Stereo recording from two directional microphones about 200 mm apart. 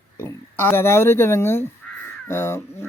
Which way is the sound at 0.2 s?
10° left (ahead or behind).